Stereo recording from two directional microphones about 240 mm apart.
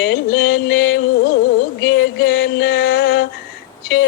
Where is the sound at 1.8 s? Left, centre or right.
Left.